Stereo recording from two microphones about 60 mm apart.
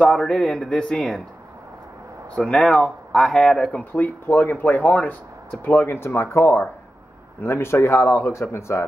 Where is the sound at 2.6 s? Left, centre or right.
Centre.